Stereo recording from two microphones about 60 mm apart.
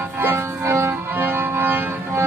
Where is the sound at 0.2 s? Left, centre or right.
Right.